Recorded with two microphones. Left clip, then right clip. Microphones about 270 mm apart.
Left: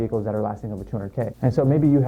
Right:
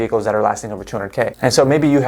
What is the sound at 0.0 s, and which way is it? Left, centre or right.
Speech, centre.